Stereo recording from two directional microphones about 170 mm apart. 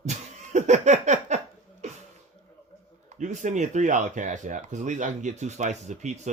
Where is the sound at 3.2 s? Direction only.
45° right (ahead or behind).